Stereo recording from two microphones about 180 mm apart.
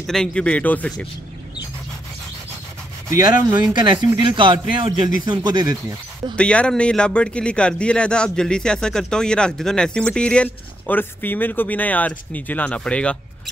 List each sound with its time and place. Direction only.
0.0 s speech: 5° left (ahead or behind)
3.1 s speech: 15° right (ahead or behind)
3.7 s speech: 25° right (ahead or behind)
6.3 s speech: 5° left (ahead or behind)